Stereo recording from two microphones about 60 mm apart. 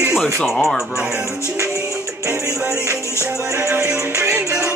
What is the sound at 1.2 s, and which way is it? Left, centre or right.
Music, right.